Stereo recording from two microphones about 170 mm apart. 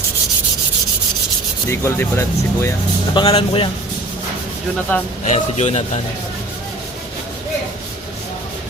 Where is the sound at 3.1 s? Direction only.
35° left (ahead or behind).